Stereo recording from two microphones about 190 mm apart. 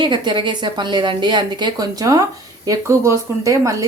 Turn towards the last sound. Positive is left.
turn(degrees=-15)  # may be behind; listen again after turning